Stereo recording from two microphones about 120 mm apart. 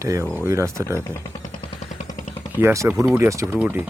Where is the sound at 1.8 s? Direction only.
75° left (ahead or behind).